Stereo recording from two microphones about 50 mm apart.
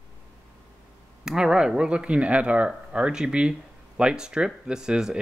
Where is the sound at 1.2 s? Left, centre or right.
Centre.